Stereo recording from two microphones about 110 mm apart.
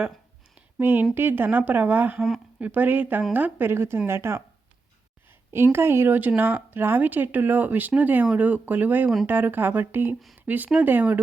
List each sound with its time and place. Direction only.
0.8 s a woman's voice: 20° right (ahead or behind)
5.5 s speech: 25° right (ahead or behind)